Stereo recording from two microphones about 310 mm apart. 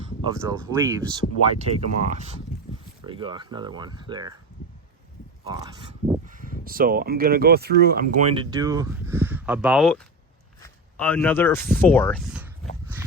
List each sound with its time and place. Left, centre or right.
0.3 s speech: centre
1.5 s speech: right
5.5 s speech: centre
6.2 s speech: right; by 12.5 s centre